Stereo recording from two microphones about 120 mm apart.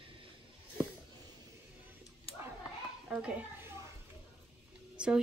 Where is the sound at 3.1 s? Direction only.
10° right (ahead or behind).